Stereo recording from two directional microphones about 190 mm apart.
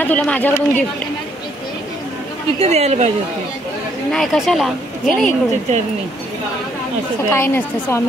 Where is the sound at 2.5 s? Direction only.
35° right (ahead or behind).